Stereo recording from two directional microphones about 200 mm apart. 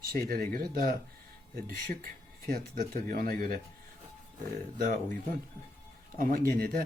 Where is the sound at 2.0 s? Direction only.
45° right (ahead or behind).